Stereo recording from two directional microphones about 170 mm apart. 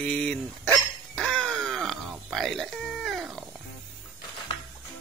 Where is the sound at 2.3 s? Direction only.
Centre (ahead or behind).